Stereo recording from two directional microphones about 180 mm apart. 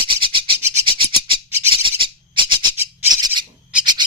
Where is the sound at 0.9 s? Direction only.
30° right (ahead or behind).